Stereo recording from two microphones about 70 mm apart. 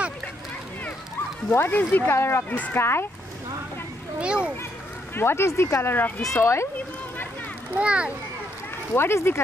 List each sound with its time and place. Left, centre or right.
1.5 s speech: left
4.2 s a child's voice: centre
5.1 s speech: left
6.3 s speech: left
7.7 s a child's voice: centre
8.9 s speech: left